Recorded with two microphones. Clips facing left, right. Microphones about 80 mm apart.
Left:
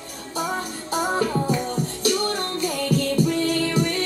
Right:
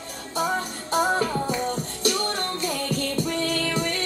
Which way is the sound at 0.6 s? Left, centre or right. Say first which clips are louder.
Right 1 dB; centre.